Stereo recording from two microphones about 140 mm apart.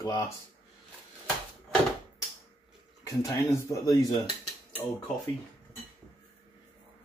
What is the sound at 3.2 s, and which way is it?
Speech, 25° left (ahead or behind).